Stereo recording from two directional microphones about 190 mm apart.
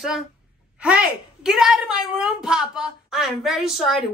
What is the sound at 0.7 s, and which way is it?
A woman's voice, 5° right (ahead or behind).